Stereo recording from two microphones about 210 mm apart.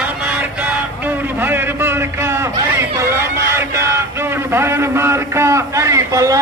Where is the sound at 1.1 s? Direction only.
10° right (ahead or behind).